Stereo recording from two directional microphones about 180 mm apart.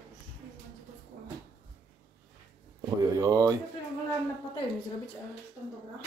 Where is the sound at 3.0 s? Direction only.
20° right (ahead or behind).